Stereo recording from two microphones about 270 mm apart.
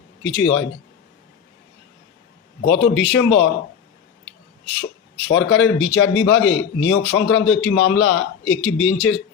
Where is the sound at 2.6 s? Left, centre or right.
Left.